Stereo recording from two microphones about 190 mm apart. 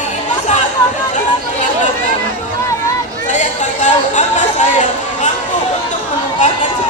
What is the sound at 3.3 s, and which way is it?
Chatter, 40° left (ahead or behind).